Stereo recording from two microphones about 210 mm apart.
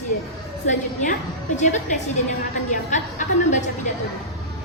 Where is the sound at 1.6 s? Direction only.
35° left (ahead or behind).